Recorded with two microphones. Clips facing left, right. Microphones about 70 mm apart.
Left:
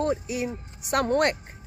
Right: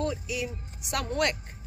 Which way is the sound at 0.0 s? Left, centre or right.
Left.